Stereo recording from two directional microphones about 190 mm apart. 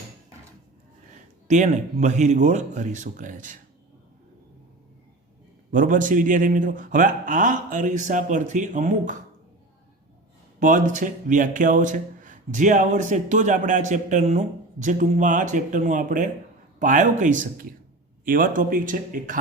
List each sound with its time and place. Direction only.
1.5 s speech: 40° right (ahead or behind)
5.7 s a man's voice: 45° right (ahead or behind)
10.6 s a man's voice: 40° right (ahead or behind)